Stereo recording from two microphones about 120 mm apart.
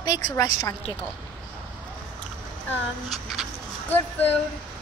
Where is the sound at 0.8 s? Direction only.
55° left (ahead or behind).